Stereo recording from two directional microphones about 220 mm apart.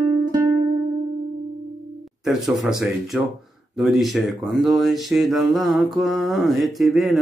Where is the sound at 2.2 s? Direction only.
Centre (ahead or behind).